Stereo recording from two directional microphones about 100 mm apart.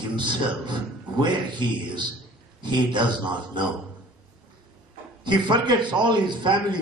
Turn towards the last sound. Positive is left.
turn(degrees=-50)  # may be behind; listen again after turning